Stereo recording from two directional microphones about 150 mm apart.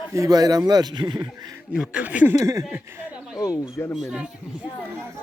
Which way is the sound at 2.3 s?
20° right (ahead or behind).